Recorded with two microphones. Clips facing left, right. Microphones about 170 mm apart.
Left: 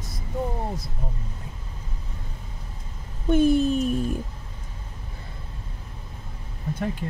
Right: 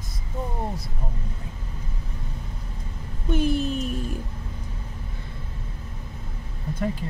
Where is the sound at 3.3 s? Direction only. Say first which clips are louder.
Left 5 dB; 50° left (ahead or behind).